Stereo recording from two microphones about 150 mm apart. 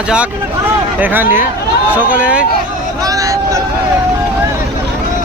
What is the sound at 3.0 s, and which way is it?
Hubbub, 25° right (ahead or behind).